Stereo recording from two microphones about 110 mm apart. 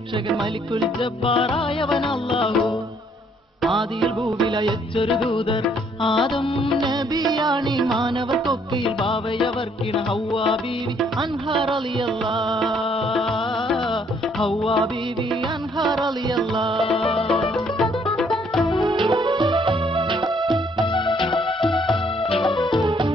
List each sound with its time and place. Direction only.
1.2 s music: 55° left (ahead or behind)
3.6 s music: centre (ahead or behind)
4.9 s music: 55° left (ahead or behind)
6.1 s music: centre (ahead or behind)
7.3 s music: 40° right (ahead or behind)
7.7 s music: centre (ahead or behind)
8.8 s music: 60° left (ahead or behind)
12.5 s music: centre (ahead or behind)
14.4 s music: 55° left (ahead or behind)
16.7 s music: centre (ahead or behind)
18.1 s music: 5° left (ahead or behind)
18.9 s music: 45° right (ahead or behind)
20.8 s music: 45° left (ahead or behind)
22.8 s music: 50° right (ahead or behind)